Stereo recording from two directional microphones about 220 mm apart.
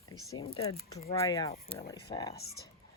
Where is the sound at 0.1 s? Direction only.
15° left (ahead or behind).